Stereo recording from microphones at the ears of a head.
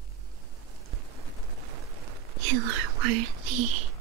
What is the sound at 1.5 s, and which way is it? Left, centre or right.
Whispering, right.